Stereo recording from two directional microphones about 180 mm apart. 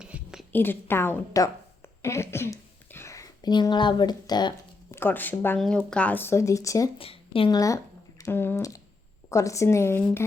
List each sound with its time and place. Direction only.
0.0 s a sound: 5° right (ahead or behind)
0.5 s a woman's voice: 10° left (ahead or behind)
4.9 s speech: 10° left (ahead or behind)
7.0 s speech: 30° left (ahead or behind); by 10.2 s 15° left (ahead or behind)